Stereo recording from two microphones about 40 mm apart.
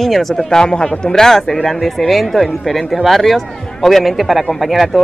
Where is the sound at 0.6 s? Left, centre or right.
Centre.